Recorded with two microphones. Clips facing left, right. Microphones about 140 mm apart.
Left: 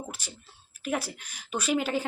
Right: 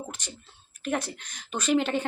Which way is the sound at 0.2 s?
5° left (ahead or behind).